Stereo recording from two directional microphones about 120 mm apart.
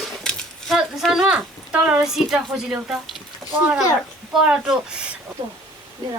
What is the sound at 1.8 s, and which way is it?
A woman's voice, 5° right (ahead or behind).